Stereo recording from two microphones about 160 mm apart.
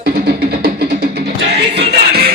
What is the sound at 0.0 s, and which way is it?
Music, 70° right (ahead or behind).